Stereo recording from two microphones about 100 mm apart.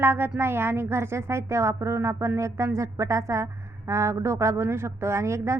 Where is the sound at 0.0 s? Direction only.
20° right (ahead or behind).